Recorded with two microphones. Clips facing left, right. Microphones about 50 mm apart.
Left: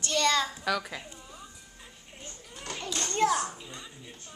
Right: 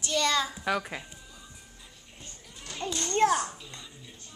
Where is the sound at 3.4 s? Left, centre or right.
Centre.